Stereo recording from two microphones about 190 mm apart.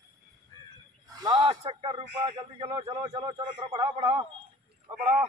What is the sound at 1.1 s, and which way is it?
A man's voice, 20° right (ahead or behind).